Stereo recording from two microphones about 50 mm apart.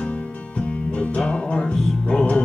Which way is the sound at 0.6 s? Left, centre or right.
Left.